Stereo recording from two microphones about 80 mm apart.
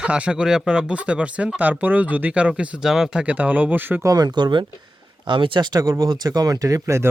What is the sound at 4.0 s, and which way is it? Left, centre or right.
Speech, right.